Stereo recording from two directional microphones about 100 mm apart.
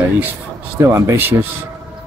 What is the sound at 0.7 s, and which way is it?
Speech, 30° right (ahead or behind).